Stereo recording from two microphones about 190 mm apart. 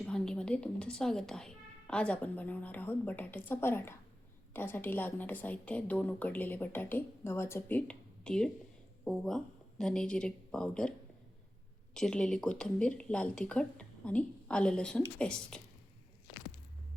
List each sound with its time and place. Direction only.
0.0 s a woman's voice: 5° left (ahead or behind)
11.9 s speech: 5° left (ahead or behind)